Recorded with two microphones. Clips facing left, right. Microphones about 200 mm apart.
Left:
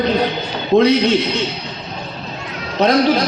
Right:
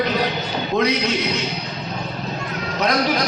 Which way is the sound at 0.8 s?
30° left (ahead or behind).